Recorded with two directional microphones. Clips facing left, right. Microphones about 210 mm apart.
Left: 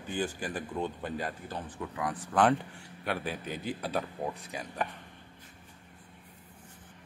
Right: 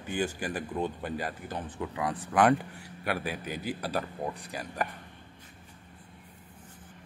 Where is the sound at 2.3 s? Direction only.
10° right (ahead or behind).